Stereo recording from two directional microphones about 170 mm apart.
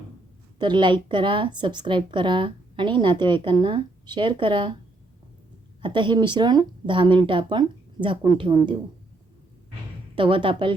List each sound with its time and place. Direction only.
0.6 s a woman's voice: 25° right (ahead or behind)
5.8 s a woman's voice: 30° right (ahead or behind)
10.2 s a woman's voice: 30° right (ahead or behind)